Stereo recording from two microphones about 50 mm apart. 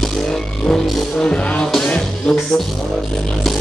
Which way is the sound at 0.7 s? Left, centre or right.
Centre.